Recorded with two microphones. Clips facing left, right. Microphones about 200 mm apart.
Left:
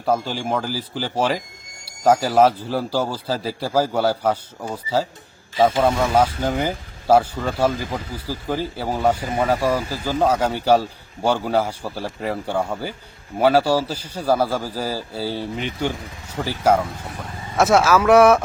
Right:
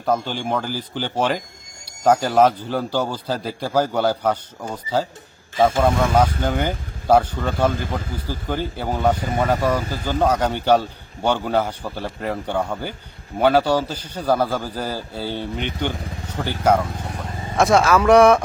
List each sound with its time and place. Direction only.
0.0 s a man's voice: 5° left (ahead or behind)